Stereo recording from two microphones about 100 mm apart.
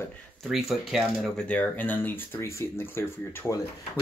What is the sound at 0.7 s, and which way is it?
Speech, centre (ahead or behind).